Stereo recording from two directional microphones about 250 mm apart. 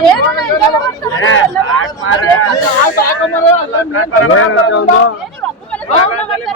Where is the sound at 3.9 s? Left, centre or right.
Left.